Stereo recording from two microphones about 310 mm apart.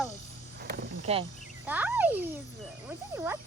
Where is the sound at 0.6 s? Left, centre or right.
Centre.